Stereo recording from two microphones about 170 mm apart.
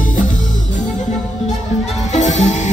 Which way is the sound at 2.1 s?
45° left (ahead or behind).